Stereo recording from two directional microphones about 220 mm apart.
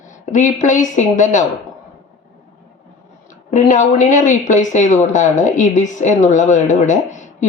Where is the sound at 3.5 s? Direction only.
35° left (ahead or behind).